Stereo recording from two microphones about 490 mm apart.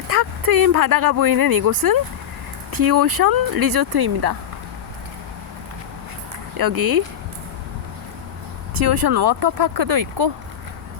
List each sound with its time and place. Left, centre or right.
0.1 s speech: right
6.6 s speech: right
8.9 s speech: right